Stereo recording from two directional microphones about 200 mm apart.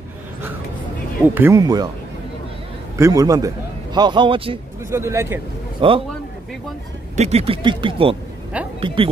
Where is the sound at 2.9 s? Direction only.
15° right (ahead or behind).